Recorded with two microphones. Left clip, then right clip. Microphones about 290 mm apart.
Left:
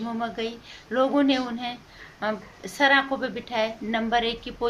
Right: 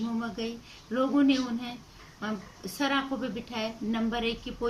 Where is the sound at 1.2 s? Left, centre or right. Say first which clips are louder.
Left 3 dB; centre.